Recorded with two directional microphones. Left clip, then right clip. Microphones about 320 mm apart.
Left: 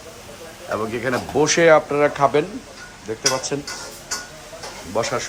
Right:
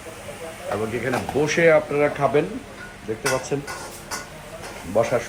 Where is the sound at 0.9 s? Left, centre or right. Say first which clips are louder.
Left 3 dB; centre.